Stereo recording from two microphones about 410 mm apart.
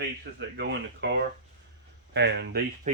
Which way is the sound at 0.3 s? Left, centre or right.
Right.